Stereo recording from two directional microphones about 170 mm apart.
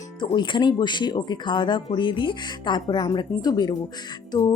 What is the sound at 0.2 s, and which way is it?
Speech, 25° left (ahead or behind).